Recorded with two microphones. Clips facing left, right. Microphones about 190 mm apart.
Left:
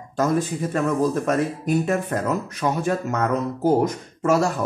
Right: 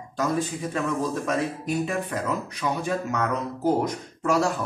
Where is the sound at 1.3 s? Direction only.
50° left (ahead or behind).